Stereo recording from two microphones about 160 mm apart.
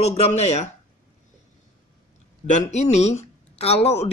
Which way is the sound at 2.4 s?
50° left (ahead or behind).